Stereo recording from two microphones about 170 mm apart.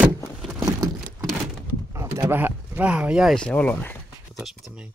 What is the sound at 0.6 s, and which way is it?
Vehicle, 20° right (ahead or behind).